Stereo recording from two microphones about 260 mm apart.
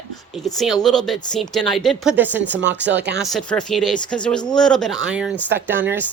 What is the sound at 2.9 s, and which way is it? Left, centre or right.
Speech, right.